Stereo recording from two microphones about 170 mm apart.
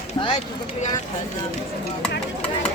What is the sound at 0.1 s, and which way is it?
Speech, 35° left (ahead or behind).